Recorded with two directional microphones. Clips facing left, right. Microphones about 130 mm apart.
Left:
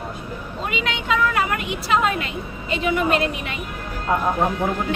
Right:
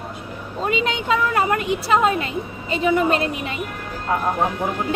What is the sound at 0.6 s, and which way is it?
Speech, 35° right (ahead or behind).